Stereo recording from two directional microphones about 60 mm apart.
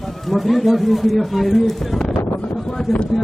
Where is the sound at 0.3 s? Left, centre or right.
Centre.